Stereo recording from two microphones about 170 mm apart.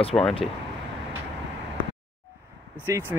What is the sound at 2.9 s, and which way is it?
Speech, 15° right (ahead or behind).